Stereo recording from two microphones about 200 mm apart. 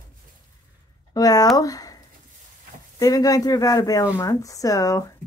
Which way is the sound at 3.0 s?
15° left (ahead or behind).